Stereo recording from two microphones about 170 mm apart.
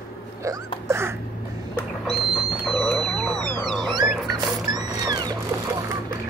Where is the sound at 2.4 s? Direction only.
Centre (ahead or behind).